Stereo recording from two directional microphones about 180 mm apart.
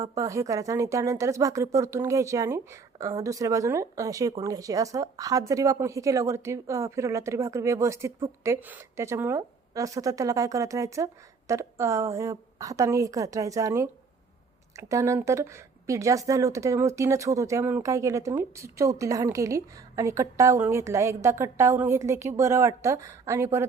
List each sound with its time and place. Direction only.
0.2 s speech: 20° right (ahead or behind)